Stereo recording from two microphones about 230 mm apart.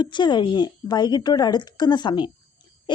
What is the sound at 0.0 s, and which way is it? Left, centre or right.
A woman's voice, centre.